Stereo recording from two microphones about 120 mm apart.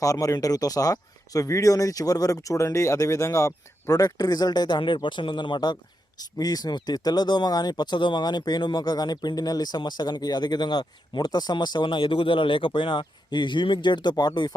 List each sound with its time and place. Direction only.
0.0 s speech: 30° left (ahead or behind)